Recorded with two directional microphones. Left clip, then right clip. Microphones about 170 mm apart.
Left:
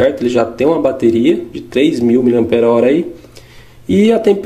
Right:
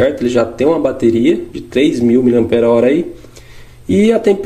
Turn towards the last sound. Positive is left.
turn(degrees=0)  # may be behind; listen again after turning